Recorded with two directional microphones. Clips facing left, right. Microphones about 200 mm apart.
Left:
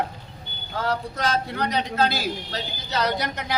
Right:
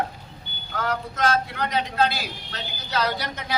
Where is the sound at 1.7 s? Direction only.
40° left (ahead or behind).